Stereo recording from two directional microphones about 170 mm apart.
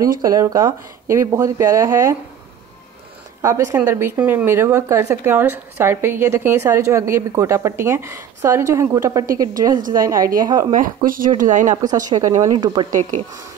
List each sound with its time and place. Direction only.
0.0 s speech: 20° right (ahead or behind)
3.4 s speech: 15° right (ahead or behind)
9.8 s speech: 50° right (ahead or behind)
10.4 s speech: 25° right (ahead or behind)
11.1 s speech: 55° right (ahead or behind)
11.8 s speech: 20° right (ahead or behind)